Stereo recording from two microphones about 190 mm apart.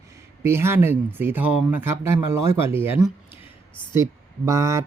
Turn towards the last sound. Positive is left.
turn(degrees=-15)  # may be behind; listen again after turning